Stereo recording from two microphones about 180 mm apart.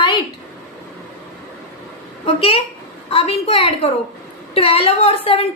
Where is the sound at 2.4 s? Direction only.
35° left (ahead or behind).